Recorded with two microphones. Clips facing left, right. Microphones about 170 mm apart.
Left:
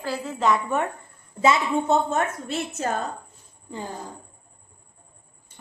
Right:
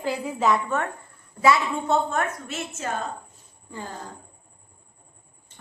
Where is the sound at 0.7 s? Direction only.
15° left (ahead or behind).